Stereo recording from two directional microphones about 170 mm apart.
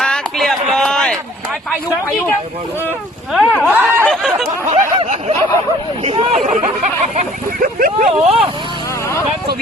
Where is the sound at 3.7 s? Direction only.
10° right (ahead or behind).